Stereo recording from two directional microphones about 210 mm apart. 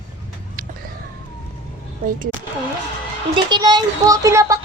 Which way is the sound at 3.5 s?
20° right (ahead or behind).